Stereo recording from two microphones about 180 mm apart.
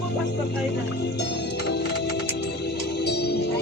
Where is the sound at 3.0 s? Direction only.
65° left (ahead or behind).